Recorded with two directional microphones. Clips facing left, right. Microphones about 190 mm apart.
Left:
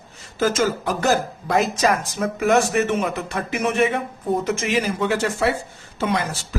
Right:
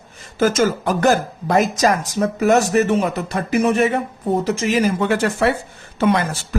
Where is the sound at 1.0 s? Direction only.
45° right (ahead or behind).